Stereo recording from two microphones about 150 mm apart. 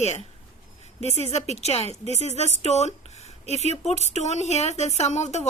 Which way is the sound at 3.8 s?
50° left (ahead or behind).